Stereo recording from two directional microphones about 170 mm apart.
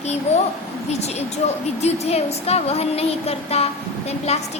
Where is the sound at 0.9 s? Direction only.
40° left (ahead or behind).